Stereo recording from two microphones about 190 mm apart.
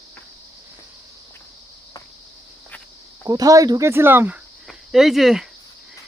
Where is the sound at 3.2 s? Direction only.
20° right (ahead or behind).